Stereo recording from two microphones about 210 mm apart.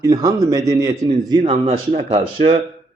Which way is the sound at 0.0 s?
15° right (ahead or behind).